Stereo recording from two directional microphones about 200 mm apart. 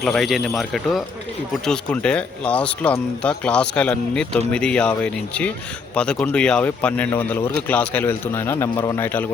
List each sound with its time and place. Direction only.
0.0 s a man's voice: centre (ahead or behind)